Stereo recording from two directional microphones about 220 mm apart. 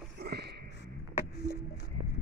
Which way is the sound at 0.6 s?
50° left (ahead or behind).